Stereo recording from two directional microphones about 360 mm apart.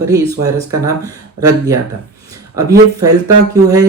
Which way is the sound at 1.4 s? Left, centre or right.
Centre.